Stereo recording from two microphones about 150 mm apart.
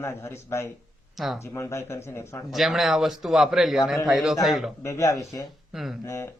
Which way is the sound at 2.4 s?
Centre (ahead or behind).